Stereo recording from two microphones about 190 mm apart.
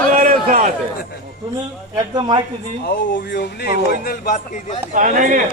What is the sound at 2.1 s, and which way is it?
Speech, 25° right (ahead or behind).